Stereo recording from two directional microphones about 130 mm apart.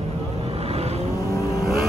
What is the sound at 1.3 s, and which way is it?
Vehicle, 25° left (ahead or behind).